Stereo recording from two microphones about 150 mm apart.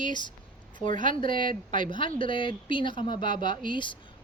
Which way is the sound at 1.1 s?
35° left (ahead or behind).